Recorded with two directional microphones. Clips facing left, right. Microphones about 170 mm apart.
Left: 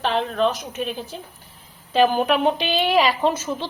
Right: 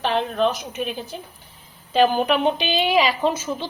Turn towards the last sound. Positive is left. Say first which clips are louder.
# left 1 dB
turn(degrees=0)  # may be behind; listen again after turning